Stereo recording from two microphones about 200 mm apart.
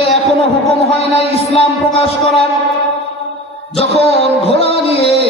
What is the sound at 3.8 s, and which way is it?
Music, 30° left (ahead or behind).